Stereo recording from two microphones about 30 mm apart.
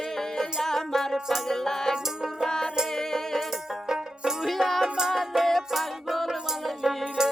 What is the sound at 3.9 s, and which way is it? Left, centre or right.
Music, centre.